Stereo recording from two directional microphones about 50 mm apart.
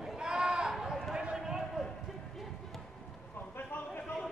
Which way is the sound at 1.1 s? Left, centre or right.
Centre.